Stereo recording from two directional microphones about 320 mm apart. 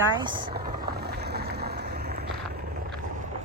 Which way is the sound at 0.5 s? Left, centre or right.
Right.